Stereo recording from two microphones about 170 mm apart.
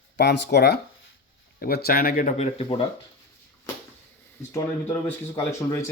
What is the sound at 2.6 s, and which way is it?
Speech, 25° left (ahead or behind).